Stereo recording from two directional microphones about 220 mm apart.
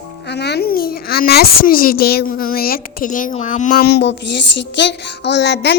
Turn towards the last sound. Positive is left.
turn(degrees=50)  # may be behind; listen again after turning